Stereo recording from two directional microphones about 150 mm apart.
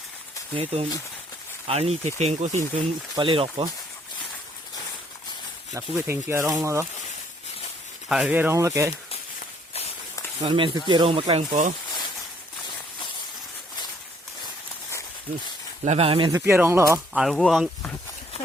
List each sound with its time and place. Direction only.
0.5 s speech: 40° right (ahead or behind)
2.7 s speech: 35° right (ahead or behind)
5.7 s speech: 15° right (ahead or behind)
8.1 s speech: 10° right (ahead or behind)
10.4 s speech: 35° right (ahead or behind)
15.8 s speech: 45° right (ahead or behind)
16.5 s speech: 15° right (ahead or behind)
17.2 s speech: centre (ahead or behind)